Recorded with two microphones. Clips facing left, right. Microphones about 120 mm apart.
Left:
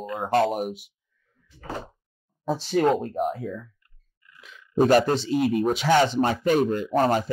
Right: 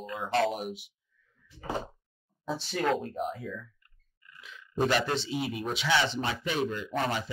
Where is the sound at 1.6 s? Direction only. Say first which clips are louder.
Even; 20° right (ahead or behind).